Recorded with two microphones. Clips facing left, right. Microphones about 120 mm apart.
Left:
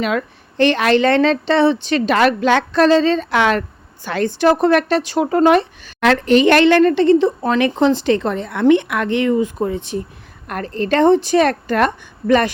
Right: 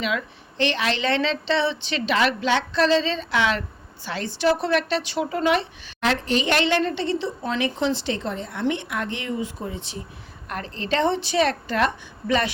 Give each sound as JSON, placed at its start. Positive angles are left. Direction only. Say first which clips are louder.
{"t": 0.0, "sound": "a woman's voice", "louder": "left 7 dB", "side_deg": 50}
{"t": 6.0, "sound": "a woman's voice", "louder": "left 10 dB", "side_deg": 60}